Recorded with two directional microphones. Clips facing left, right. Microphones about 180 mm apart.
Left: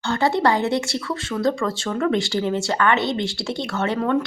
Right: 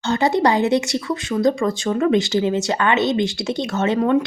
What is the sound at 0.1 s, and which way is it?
Speech, 20° right (ahead or behind).